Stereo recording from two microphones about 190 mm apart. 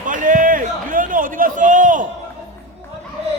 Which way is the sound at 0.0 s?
45° right (ahead or behind).